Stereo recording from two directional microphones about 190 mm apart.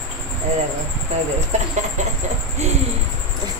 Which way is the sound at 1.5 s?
35° right (ahead or behind).